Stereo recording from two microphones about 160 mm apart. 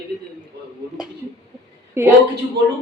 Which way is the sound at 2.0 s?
15° right (ahead or behind).